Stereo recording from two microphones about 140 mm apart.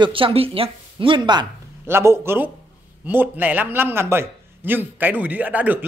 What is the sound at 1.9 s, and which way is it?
A man's voice, 15° right (ahead or behind).